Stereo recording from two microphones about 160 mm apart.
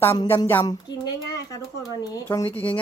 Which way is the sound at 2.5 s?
10° left (ahead or behind).